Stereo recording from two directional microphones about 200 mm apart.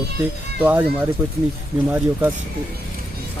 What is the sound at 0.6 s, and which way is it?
Speech, 10° right (ahead or behind).